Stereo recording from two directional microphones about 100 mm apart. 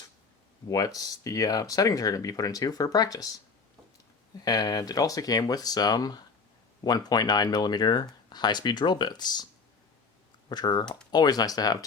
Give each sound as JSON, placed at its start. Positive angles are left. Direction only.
{"t": 0.7, "sound": "speech", "side_deg": 35}
{"t": 4.4, "sound": "speech", "side_deg": 40}
{"t": 10.5, "sound": "speech", "side_deg": 45}